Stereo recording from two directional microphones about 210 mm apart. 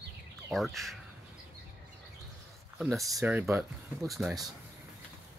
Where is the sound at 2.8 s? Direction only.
Centre (ahead or behind).